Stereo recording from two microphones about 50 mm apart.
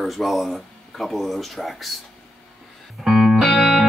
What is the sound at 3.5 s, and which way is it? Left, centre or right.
Music, centre.